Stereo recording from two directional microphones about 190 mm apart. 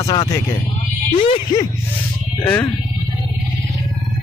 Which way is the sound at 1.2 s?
25° left (ahead or behind).